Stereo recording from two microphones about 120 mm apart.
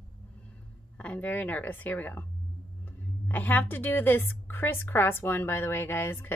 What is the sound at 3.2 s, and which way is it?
A woman's voice, 15° left (ahead or behind).